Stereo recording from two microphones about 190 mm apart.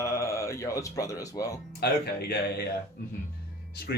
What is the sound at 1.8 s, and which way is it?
Speech, 60° left (ahead or behind).